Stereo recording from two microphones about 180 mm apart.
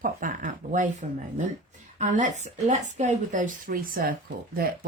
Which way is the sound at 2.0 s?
40° right (ahead or behind).